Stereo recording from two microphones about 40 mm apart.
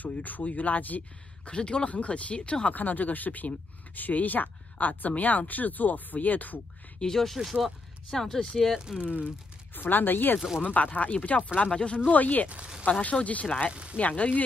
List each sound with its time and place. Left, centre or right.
0.0 s speech: left
1.4 s speech: left
1.9 s speech: left
2.7 s speech: left
7.0 s speech: centre
7.3 s speech: centre
8.1 s speech: centre
8.7 s speech: centre
9.8 s speech: left
10.6 s speech: left
12.1 s speech: left
12.4 s speech: right
13.0 s speech: left